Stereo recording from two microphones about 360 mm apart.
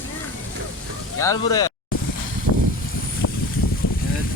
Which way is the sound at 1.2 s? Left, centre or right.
Centre.